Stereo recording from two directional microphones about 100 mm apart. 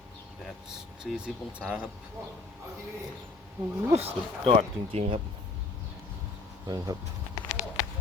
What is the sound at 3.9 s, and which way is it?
Speech, 85° right.